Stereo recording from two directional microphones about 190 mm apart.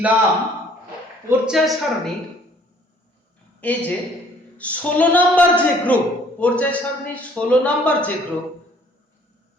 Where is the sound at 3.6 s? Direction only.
10° left (ahead or behind).